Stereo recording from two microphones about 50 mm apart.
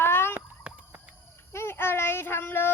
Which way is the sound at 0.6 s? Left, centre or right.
Right.